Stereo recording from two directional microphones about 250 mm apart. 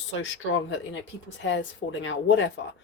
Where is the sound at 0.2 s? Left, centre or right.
Left.